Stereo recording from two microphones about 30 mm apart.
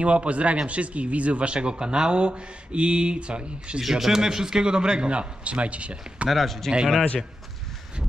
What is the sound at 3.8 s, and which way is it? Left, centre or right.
Speech, centre.